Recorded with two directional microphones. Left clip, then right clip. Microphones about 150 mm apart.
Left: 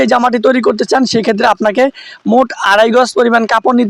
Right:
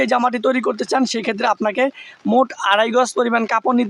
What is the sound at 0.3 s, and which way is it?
Speech, 30° left (ahead or behind).